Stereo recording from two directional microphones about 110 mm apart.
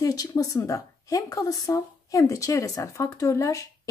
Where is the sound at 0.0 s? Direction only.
35° left (ahead or behind).